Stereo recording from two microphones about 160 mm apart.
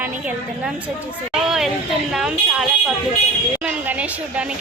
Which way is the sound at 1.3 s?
5° right (ahead or behind).